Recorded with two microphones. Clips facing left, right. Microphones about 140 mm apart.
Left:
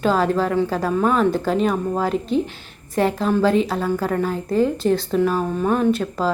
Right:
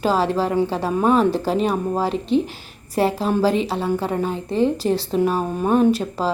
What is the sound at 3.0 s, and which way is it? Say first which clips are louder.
A woman's voice: even; 35° right (ahead or behind).